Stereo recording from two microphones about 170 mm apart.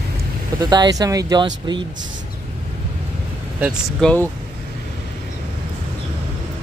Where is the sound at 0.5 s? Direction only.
25° right (ahead or behind).